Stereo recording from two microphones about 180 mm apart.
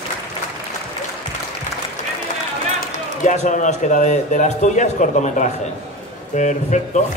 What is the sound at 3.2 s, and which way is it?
A man's voice, 40° left (ahead or behind).